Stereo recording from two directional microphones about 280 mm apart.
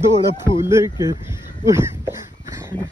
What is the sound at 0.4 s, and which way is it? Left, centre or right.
Speech, centre.